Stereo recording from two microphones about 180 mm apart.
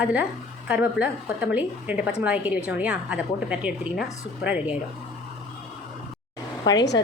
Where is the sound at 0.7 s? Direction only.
10° right (ahead or behind).